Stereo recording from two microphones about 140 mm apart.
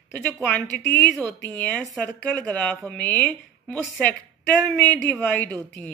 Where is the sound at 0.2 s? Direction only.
5° left (ahead or behind).